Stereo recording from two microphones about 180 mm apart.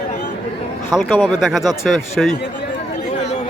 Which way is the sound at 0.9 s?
5° right (ahead or behind).